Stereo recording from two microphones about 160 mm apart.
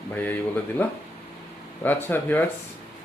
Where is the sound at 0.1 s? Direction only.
10° left (ahead or behind).